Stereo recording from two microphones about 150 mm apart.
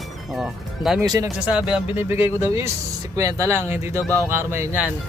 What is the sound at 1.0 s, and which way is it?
Speech, 25° right (ahead or behind).